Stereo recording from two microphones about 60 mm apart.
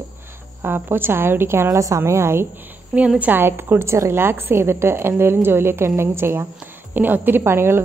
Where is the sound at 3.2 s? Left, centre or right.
Right.